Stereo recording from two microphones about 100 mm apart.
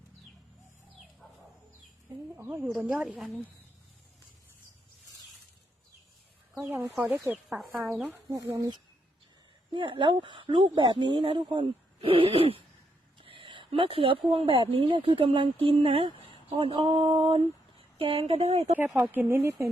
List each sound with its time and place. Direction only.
2.3 s speech: 20° right (ahead or behind)
2.6 s speech: 10° right (ahead or behind)
6.5 s a sound: 5° right (ahead or behind)
7.2 s speech: 25° right (ahead or behind)
7.9 s speech: 5° right (ahead or behind)
8.3 s speech: 30° right (ahead or behind)
9.7 s speech: 55° right (ahead or behind); by 18.6 s 90° right
18.9 s speech: 5° right (ahead or behind)
19.1 s speech: 20° right (ahead or behind)